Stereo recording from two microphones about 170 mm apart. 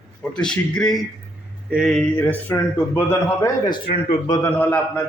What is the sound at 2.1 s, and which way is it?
A man's voice, 10° left (ahead or behind).